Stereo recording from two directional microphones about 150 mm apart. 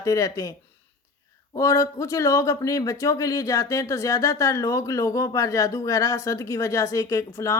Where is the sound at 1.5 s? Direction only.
20° left (ahead or behind).